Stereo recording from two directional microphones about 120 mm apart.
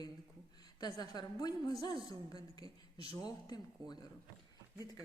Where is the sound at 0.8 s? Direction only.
35° left (ahead or behind).